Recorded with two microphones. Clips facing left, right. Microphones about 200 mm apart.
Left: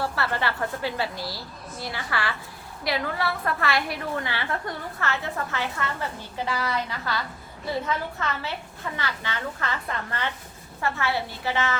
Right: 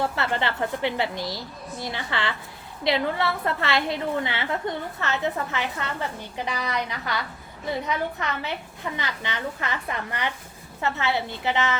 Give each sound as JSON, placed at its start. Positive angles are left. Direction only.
{"t": 0.0, "sound": "a woman's voice", "side_deg": -20}